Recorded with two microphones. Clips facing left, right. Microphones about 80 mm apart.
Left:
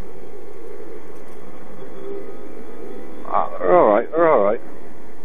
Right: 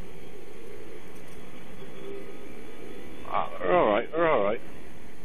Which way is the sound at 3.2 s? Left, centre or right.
Left.